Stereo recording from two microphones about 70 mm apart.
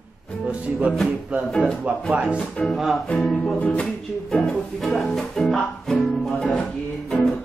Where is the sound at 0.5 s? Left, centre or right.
Centre.